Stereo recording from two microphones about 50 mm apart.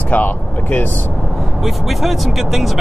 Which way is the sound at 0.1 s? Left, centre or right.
Left.